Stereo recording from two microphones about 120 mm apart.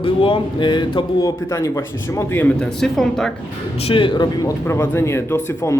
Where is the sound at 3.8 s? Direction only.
50° left (ahead or behind).